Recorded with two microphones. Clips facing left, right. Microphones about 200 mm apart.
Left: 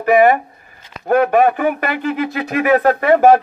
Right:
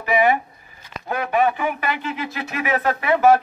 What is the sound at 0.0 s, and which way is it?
A man's voice, 50° left (ahead or behind).